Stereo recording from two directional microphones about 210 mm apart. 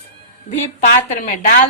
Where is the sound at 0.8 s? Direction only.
40° left (ahead or behind).